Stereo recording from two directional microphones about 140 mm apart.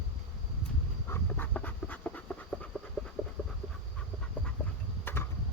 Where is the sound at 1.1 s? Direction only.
15° left (ahead or behind).